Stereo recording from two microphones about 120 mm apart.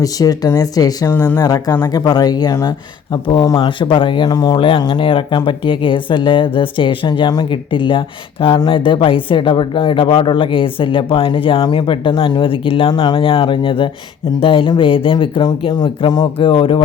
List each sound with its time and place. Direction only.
0.0 s speech: 30° left (ahead or behind); by 16.8 s 45° left (ahead or behind)